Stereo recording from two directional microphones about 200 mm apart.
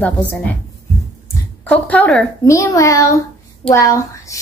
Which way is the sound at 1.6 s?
5° left (ahead or behind).